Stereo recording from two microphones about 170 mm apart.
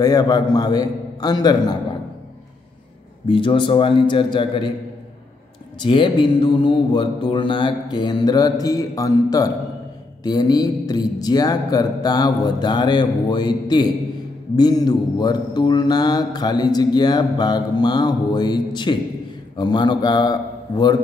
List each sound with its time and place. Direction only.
0.0 s mantra: 25° left (ahead or behind)
3.3 s mantra: 30° left (ahead or behind)
5.8 s mantra: 30° left (ahead or behind)
19.5 s a man's voice: 25° left (ahead or behind)